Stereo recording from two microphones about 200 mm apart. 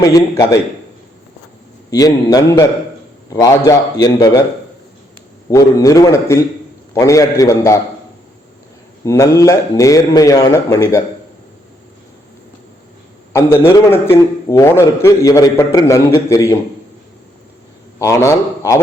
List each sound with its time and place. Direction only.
0.0 s a man's voice: 15° left (ahead or behind)
1.9 s a man's voice: 20° left (ahead or behind)
5.5 s a man's voice: 15° left (ahead or behind)
9.0 s a man's voice: 15° left (ahead or behind)
13.3 s a man's voice: 15° left (ahead or behind)
18.0 s a man's voice: 15° left (ahead or behind)